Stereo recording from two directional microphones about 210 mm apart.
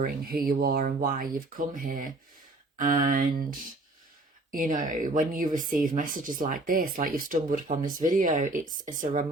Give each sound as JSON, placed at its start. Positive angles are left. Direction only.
{"t": 0.0, "sound": "speech", "side_deg": -45}
{"t": 4.5, "sound": "speech", "side_deg": -40}